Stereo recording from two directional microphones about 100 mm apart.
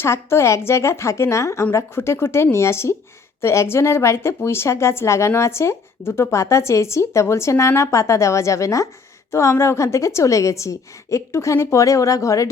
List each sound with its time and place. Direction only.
0.0 s a woman's voice: 25° left (ahead or behind)